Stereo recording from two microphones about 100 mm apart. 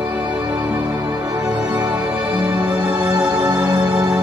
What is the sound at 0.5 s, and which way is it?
Music, 20° right (ahead or behind).